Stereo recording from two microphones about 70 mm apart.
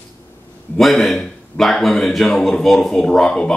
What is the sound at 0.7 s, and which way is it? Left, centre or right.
Speech, centre.